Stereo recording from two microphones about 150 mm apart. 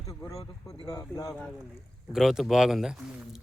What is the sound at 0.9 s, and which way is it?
Speech, 25° left (ahead or behind).